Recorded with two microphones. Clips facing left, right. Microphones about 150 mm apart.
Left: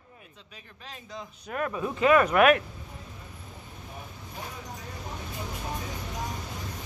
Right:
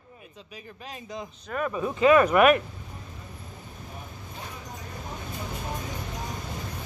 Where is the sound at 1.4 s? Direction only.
Centre (ahead or behind).